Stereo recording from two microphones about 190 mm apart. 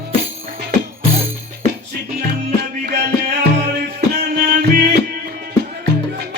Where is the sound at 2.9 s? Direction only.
60° right (ahead or behind).